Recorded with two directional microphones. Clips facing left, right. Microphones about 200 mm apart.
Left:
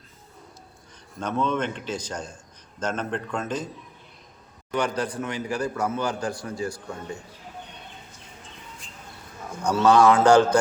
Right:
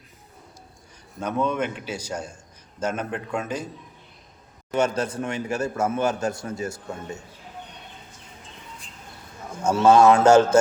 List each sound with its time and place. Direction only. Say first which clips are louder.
1.2 s speech: right 1 dB; 10° right (ahead or behind)
4.7 s a man's voice: right 3 dB; 25° right (ahead or behind)
9.6 s a man's voice: right 2 dB; 25° right (ahead or behind)